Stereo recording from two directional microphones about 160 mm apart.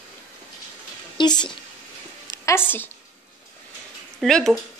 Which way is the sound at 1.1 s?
25° left (ahead or behind).